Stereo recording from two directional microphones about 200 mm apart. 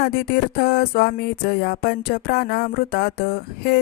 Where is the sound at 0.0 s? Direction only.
50° left (ahead or behind).